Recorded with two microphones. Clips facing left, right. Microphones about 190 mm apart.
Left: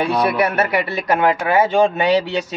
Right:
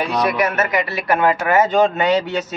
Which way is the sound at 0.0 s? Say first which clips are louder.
Left 1 dB; 30° left (ahead or behind).